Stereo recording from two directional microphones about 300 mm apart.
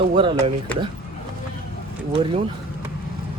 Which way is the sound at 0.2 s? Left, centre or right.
Centre.